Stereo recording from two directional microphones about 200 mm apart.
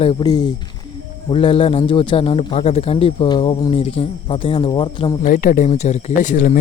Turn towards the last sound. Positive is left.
turn(degrees=40)  # may be behind; listen again after turning